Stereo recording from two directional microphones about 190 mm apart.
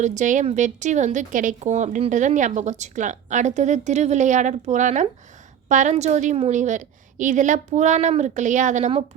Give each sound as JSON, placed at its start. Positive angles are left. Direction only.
{"t": 0.0, "sound": "a woman's voice", "side_deg": -40}